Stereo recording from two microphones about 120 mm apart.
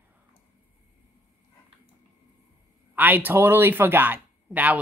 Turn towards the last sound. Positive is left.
turn(degrees=-10)  # may be behind; listen again after turning